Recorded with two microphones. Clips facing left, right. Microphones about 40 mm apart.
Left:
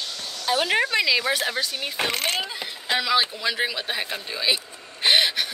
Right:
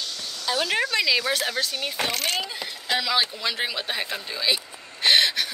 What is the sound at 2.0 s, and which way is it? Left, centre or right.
Speech, left.